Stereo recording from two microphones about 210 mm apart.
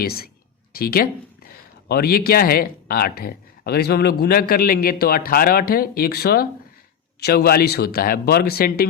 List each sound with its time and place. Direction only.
0.0 s speech: 45° left (ahead or behind)